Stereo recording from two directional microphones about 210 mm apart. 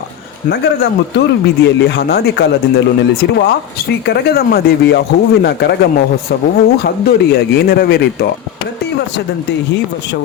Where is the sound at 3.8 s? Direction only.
50° left (ahead or behind).